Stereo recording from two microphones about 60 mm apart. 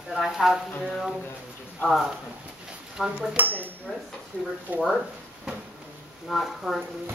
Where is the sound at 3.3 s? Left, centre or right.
Right.